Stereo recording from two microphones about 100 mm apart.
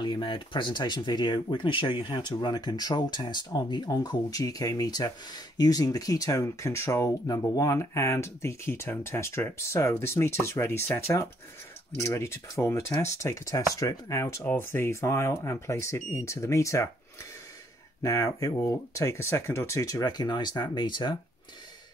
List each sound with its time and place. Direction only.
0.0 s speech: 55° left (ahead or behind); by 7.1 s 30° left (ahead or behind)
7.2 s speech: 40° left (ahead or behind)
14.4 s speech: 20° left (ahead or behind)
18.0 s speech: 35° left (ahead or behind); by 21.2 s 50° left (ahead or behind)